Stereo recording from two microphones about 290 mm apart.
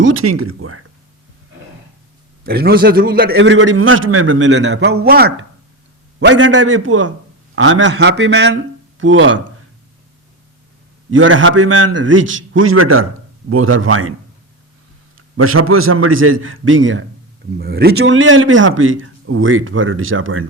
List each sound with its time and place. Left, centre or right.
0.0 s speech: right
2.4 s a man's voice: right
11.1 s speech: right
15.4 s speech: right